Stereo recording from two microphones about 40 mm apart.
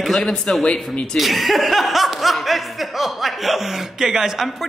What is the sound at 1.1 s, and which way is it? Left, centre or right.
Speech, centre.